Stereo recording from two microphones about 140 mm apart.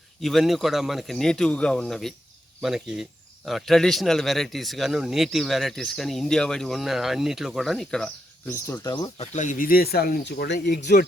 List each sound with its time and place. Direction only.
0.2 s speech: centre (ahead or behind)
8.4 s speech: 20° left (ahead or behind)
9.1 s speech: 50° left (ahead or behind); by 10.8 s 90° left